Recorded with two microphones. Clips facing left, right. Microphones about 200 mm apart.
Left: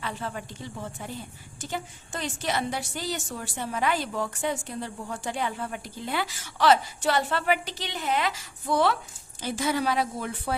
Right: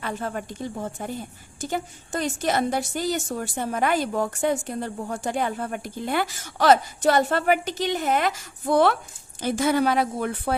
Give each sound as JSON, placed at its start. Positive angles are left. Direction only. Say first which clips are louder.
{"t": 0.0, "sound": "a woman's voice", "louder": "right 4 dB", "side_deg": -45}